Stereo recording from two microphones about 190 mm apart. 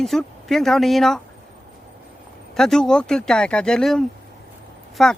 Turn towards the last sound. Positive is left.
turn(degrees=0)  # may be behind; listen again after turning